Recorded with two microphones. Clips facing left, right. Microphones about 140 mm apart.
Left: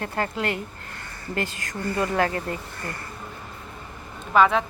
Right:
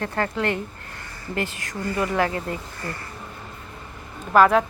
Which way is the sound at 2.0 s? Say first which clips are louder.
Even; 35° left (ahead or behind).